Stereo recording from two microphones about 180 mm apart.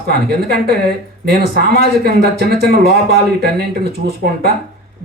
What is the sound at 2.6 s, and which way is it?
Speech, 60° right (ahead or behind).